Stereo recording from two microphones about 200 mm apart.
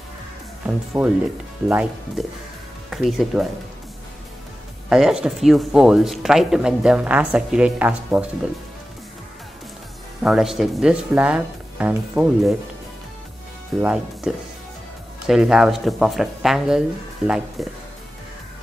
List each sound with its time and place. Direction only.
0.7 s speech: 5° right (ahead or behind)
4.8 s speech: 5° right (ahead or behind)
10.2 s speech: centre (ahead or behind)
13.7 s speech: 5° right (ahead or behind)